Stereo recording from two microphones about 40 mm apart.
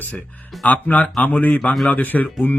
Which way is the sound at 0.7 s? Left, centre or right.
Left.